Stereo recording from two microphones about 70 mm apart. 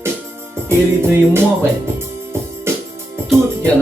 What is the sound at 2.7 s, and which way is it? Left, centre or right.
Music, right.